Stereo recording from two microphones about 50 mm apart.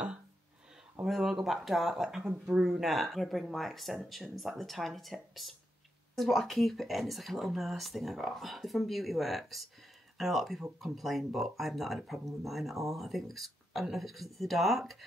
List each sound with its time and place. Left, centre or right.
1.0 s speech: centre
2.6 s speech: centre